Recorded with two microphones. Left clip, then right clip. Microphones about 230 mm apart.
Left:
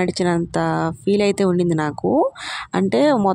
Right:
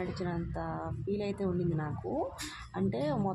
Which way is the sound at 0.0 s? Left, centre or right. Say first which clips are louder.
Left 17 dB; left.